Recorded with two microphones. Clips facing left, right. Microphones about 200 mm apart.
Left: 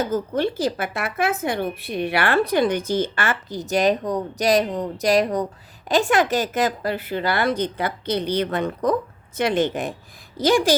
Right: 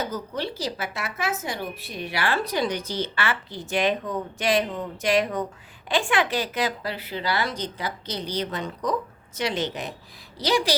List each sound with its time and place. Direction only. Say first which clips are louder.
0.0 s speech: left 7 dB; 50° left (ahead or behind)